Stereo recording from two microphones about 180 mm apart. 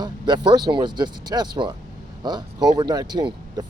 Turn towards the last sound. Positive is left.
turn(degrees=-25)  # may be behind; listen again after turning